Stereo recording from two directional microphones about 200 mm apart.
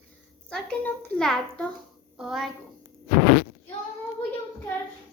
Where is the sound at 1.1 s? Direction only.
5° left (ahead or behind).